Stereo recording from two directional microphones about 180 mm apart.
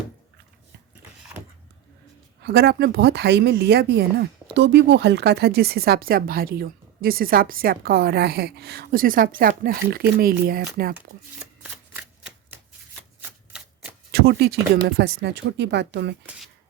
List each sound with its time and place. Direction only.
2.4 s speech: 65° right (ahead or behind)
13.5 s shuffling cards: 5° right (ahead or behind)
14.1 s speech: 65° right (ahead or behind)